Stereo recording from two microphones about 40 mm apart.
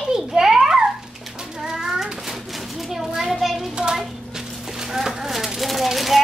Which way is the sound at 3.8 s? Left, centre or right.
Centre.